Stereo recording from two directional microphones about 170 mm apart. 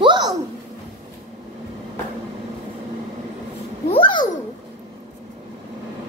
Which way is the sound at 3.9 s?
30° left (ahead or behind).